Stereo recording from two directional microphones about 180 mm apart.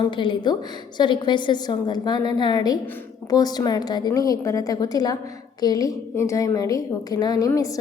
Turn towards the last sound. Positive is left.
turn(degrees=20)  # may be behind; listen again after turning